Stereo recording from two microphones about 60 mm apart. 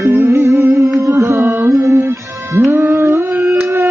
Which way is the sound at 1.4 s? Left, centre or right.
Right.